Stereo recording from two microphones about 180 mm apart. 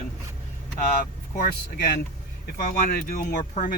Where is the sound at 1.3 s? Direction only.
60° left (ahead or behind).